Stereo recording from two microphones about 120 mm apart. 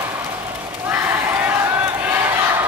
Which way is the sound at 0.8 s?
15° right (ahead or behind).